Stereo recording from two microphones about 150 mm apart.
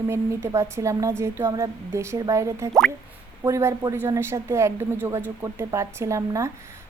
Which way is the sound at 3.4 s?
20° right (ahead or behind).